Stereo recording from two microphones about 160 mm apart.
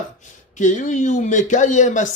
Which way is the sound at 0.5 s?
50° left (ahead or behind).